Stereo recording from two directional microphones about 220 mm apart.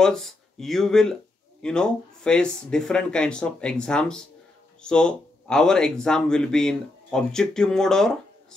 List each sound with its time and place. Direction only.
0.0 s speech: centre (ahead or behind)